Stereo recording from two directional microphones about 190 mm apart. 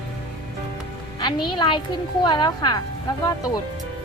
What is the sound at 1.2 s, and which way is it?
Speech, 25° left (ahead or behind).